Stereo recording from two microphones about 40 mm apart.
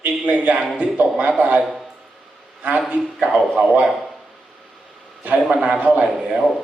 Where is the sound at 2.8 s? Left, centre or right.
Right.